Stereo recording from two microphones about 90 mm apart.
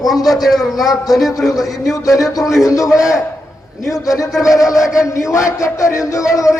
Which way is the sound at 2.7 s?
40° left (ahead or behind).